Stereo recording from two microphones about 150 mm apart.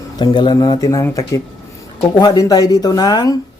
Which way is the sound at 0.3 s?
30° left (ahead or behind).